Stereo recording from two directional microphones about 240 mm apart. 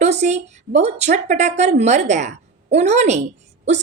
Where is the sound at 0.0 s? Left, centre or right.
Right.